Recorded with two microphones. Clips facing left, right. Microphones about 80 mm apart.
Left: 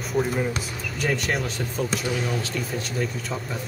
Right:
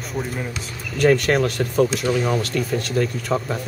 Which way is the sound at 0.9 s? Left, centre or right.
Right.